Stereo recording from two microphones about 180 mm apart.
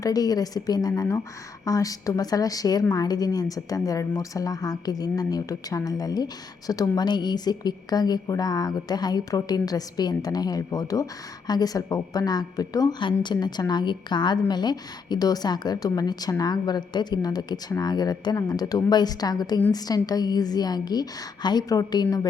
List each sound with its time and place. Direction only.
0.0 s a woman's voice: 20° left (ahead or behind)